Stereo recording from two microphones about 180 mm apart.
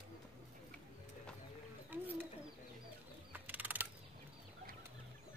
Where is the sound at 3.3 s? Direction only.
10° right (ahead or behind).